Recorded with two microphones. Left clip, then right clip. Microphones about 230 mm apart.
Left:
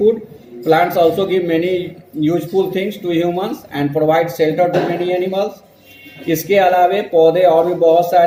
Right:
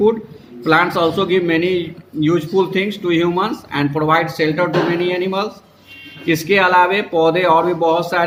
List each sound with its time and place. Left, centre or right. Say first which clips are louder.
0.6 s a man's voice: left 2 dB; right